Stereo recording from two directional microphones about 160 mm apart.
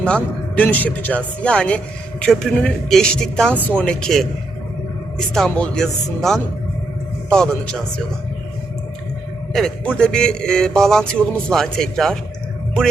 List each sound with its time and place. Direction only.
0.0 s speech: 10° left (ahead or behind)
5.5 s a man's voice: 5° left (ahead or behind)
9.5 s a man's voice: 5° left (ahead or behind)